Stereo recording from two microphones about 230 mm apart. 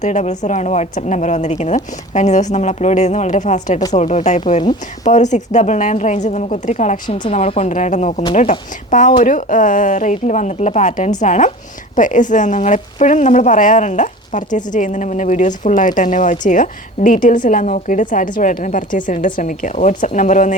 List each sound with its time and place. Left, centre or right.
0.0 s speech: left